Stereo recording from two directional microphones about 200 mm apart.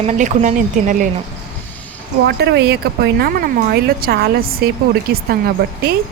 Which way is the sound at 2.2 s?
55° right (ahead or behind).